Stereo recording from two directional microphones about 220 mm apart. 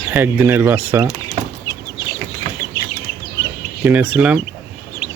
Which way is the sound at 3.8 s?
5° right (ahead or behind).